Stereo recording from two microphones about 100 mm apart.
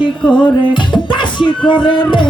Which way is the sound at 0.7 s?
50° left (ahead or behind).